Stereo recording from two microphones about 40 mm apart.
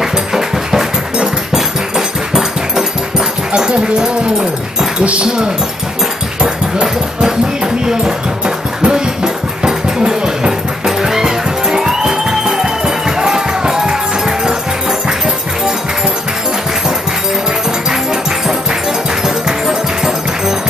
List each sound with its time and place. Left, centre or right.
0.0 s music: centre
3.5 s speech: right
5.0 s speech: right
6.4 s a sound: centre
19.2 s music: centre